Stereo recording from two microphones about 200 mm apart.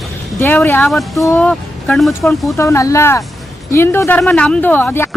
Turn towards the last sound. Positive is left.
turn(degrees=10)  # may be behind; listen again after turning